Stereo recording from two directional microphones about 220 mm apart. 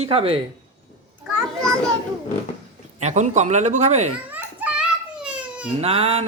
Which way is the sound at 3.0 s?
30° right (ahead or behind).